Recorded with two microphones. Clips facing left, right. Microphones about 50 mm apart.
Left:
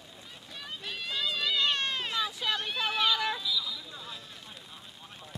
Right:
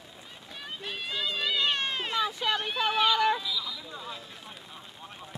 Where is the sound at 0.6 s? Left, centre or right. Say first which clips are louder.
Right 2 dB; centre.